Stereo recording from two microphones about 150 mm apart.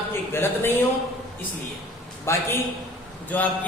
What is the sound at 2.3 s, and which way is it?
A woman's voice, 20° left (ahead or behind).